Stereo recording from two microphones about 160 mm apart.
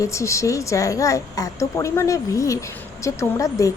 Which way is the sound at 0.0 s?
20° left (ahead or behind).